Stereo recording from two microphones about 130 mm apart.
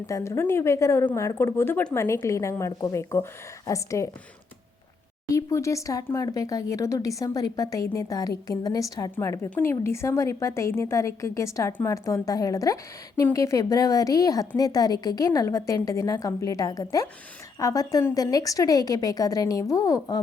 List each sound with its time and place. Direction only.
0.1 s a woman's voice: 20° left (ahead or behind)
5.3 s a woman's voice: 25° left (ahead or behind)